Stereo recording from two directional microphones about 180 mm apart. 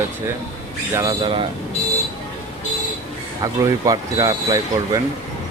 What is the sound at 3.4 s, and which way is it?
Speech, 20° right (ahead or behind).